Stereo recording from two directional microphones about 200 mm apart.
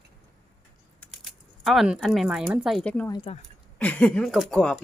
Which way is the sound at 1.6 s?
5° right (ahead or behind).